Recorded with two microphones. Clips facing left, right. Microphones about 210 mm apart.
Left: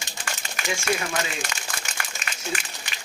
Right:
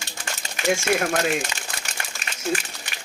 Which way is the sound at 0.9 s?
55° right (ahead or behind).